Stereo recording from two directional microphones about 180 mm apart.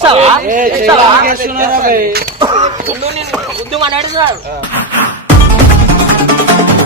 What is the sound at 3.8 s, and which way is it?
Speech, 30° right (ahead or behind).